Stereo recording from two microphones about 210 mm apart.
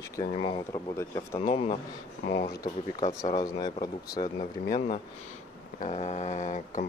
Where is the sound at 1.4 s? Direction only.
30° left (ahead or behind).